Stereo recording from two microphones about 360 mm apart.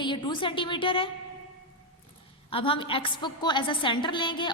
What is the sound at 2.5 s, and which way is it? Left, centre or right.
A woman's voice, centre.